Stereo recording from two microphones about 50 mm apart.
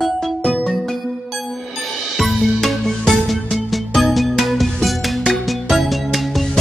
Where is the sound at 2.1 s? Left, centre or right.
Centre.